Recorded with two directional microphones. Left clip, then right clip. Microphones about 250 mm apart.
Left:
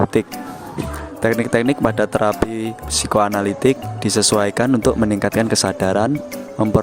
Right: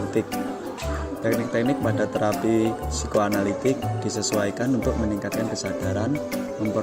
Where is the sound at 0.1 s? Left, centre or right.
Left.